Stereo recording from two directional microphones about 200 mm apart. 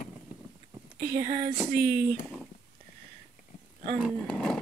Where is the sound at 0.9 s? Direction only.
20° right (ahead or behind).